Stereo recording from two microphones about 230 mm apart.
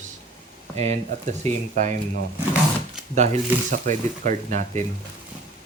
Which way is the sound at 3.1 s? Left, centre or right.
Right.